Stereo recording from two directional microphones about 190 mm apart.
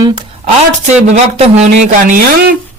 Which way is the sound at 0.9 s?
35° right (ahead or behind).